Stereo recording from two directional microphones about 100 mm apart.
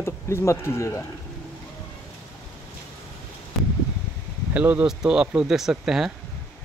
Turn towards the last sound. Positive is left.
turn(degrees=-5)  # may be behind; listen again after turning